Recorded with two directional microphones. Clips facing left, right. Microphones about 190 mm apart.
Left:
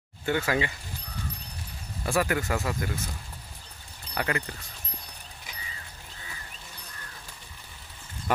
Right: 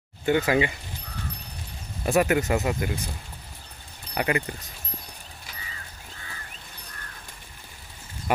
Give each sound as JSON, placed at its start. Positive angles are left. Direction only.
{"t": 0.2, "sound": "speech", "side_deg": -20}
{"t": 2.0, "sound": "speech", "side_deg": -20}
{"t": 4.1, "sound": "speech", "side_deg": -15}